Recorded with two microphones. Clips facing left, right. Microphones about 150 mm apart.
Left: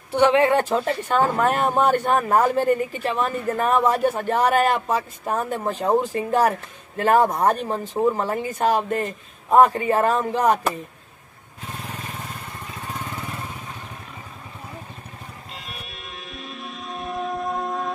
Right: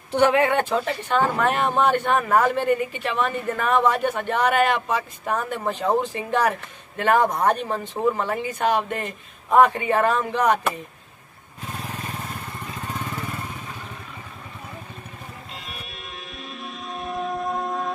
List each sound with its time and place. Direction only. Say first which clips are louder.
0.3 s a woman's voice: left 2 dB; 30° left (ahead or behind)
15.5 s music: even; centre (ahead or behind)